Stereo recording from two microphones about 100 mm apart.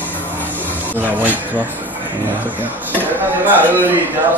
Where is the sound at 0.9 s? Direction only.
15° right (ahead or behind).